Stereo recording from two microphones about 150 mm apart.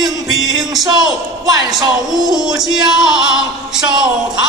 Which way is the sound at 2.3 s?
5° right (ahead or behind).